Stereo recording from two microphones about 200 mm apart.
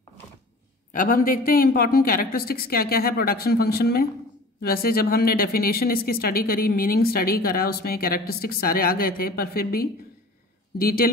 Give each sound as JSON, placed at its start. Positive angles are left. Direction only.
{"t": 0.9, "sound": "speech", "side_deg": 45}